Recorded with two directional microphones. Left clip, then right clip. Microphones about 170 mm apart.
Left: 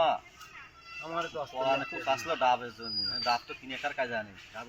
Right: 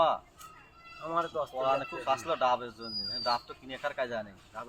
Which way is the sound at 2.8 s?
15° right (ahead or behind).